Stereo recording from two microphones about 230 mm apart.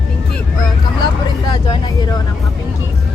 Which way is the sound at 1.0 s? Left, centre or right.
Centre.